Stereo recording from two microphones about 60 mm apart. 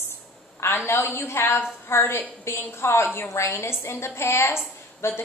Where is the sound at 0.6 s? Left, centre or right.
Left.